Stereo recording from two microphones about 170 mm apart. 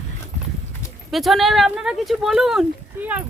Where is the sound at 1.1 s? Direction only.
Centre (ahead or behind).